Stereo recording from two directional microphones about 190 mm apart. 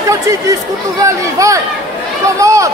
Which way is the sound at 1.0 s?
15° right (ahead or behind).